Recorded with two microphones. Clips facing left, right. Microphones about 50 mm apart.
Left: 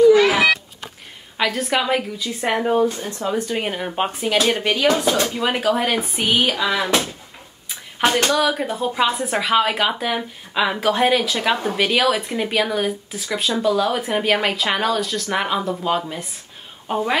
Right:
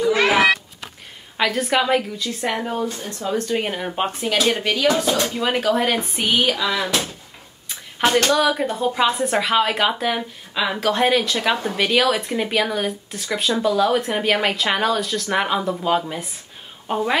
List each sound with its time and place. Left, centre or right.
0.3 s a sound: right
1.4 s speech: centre
2.4 s speech: centre
3.3 s speech: centre
8.4 s a woman's voice: centre